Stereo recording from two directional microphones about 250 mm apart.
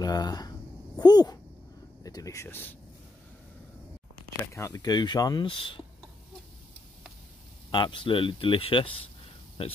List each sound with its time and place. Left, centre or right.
0.0 s speech: centre
4.6 s speech: centre
7.7 s speech: centre